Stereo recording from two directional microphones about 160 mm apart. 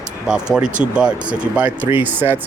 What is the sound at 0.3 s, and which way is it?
Speech, 5° right (ahead or behind).